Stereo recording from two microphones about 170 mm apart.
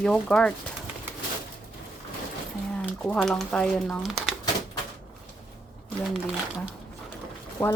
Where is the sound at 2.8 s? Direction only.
5° left (ahead or behind).